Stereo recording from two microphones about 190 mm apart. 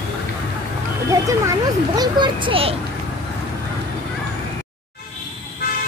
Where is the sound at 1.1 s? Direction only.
15° right (ahead or behind).